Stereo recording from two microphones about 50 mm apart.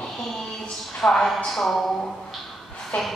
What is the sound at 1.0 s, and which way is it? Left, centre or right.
Speech, centre.